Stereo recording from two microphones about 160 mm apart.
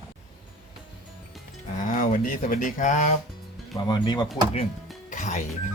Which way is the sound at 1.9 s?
55° left (ahead or behind).